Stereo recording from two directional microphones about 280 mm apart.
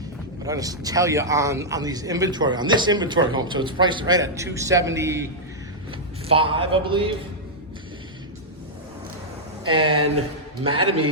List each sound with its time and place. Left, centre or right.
0.4 s a man's voice: centre
9.7 s a man's voice: centre
10.6 s a man's voice: right